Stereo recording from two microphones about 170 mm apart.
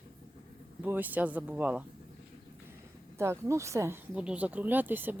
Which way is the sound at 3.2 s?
15° right (ahead or behind).